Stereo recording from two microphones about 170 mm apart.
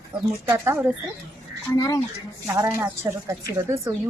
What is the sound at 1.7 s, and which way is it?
Speech, 20° left (ahead or behind).